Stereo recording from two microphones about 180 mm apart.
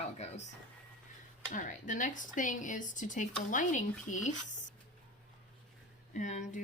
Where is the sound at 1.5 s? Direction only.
45° left (ahead or behind).